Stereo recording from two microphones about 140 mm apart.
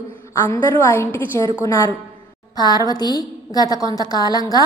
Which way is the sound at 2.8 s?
30° left (ahead or behind).